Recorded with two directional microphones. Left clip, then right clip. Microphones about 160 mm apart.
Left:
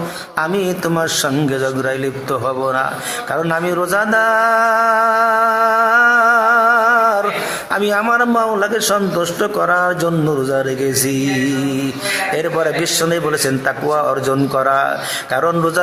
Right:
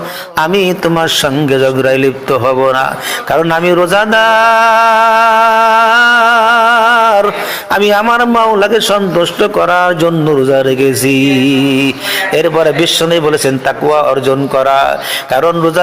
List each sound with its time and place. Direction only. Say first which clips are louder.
0.3 s a man's voice: right 7 dB; 25° right (ahead or behind)
3.3 s a sound: right 8 dB; 25° right (ahead or behind)
7.7 s a man's voice: right 7 dB; 25° right (ahead or behind)